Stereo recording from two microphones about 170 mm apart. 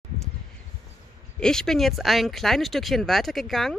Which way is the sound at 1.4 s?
5° left (ahead or behind).